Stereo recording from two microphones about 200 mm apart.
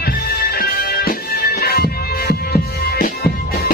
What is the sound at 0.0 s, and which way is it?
Music, 50° left (ahead or behind).